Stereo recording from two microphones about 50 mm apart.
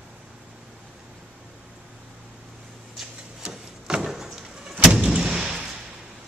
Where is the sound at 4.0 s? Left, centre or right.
Centre.